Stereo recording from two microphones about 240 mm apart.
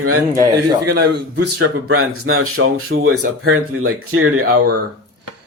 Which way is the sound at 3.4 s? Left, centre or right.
Right.